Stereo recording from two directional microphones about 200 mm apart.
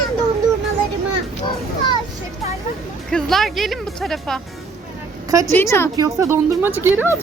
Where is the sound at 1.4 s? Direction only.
20° left (ahead or behind).